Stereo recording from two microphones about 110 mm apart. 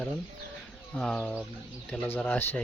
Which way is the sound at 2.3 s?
20° left (ahead or behind).